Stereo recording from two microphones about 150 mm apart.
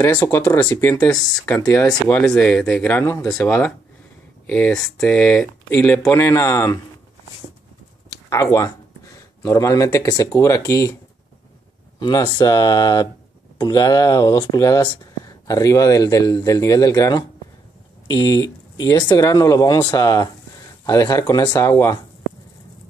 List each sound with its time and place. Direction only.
0.0 s speech: 15° left (ahead or behind)
2.0 s speech: 5° left (ahead or behind)
8.3 s speech: 20° left (ahead or behind)
12.4 s speech: 25° left (ahead or behind)